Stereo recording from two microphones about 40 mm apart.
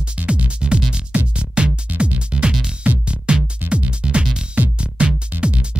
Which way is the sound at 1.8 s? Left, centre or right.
Right.